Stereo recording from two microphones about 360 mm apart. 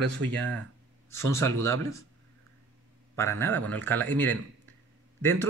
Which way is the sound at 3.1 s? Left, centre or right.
Centre.